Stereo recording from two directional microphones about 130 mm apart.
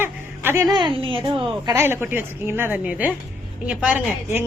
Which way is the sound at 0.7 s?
35° right (ahead or behind).